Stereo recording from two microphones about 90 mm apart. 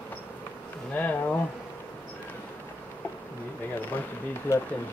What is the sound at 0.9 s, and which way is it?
Bee, 20° left (ahead or behind).